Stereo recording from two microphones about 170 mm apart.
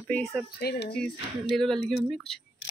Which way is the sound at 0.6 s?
70° left (ahead or behind).